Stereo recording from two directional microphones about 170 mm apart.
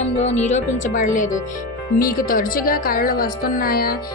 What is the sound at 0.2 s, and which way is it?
A woman's voice, 40° left (ahead or behind).